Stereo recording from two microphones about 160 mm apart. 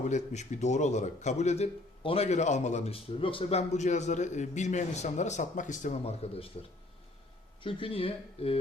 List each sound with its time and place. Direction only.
0.0 s a man's voice: 50° left (ahead or behind)
7.6 s speech: 35° left (ahead or behind)